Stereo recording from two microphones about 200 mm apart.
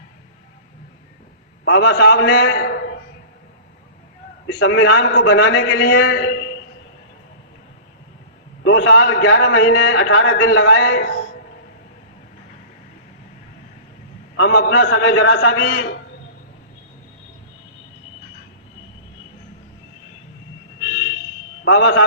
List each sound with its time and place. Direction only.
1.6 s a man's voice: 60° left (ahead or behind)
4.4 s a man's voice: 60° left (ahead or behind)
8.6 s a man's voice: 65° left (ahead or behind)
14.3 s a man's voice: 65° left (ahead or behind)
21.6 s a man's voice: 65° left (ahead or behind)